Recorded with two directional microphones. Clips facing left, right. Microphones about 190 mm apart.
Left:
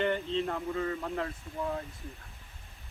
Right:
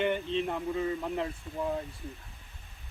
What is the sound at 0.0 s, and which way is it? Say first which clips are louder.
Speech: right 1 dB; 15° right (ahead or behind).